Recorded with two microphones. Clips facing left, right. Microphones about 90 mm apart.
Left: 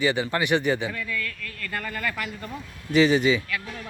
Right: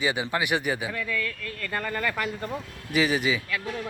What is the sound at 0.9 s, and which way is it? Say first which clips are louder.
Speech: right 1 dB; 30° right (ahead or behind).